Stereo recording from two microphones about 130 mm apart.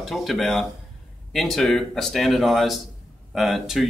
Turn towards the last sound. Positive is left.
turn(degrees=0)  # may be behind; listen again after turning